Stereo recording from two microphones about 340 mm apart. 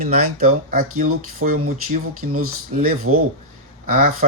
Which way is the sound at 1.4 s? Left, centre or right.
Right.